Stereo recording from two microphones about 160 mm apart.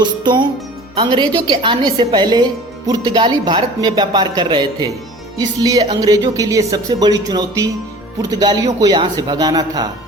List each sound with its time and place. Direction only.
0.0 s a woman's voice: 30° right (ahead or behind)